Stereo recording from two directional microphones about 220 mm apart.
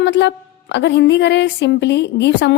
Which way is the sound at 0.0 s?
50° left (ahead or behind).